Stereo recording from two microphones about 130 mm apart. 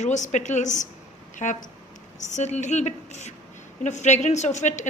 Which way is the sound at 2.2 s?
65° left (ahead or behind).